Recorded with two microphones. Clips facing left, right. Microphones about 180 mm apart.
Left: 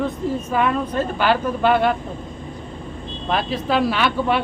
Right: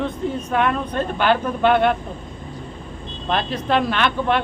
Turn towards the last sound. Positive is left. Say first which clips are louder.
# even
turn(degrees=5)  # may be behind; listen again after turning